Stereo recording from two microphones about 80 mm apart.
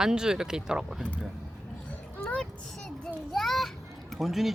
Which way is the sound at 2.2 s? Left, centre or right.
Centre.